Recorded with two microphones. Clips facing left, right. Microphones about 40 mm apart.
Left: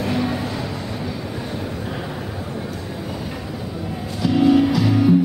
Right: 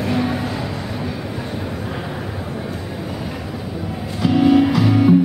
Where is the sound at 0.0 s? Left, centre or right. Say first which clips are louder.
Right 2 dB; centre.